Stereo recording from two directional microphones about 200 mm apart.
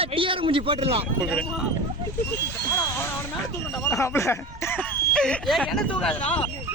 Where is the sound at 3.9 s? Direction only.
15° left (ahead or behind).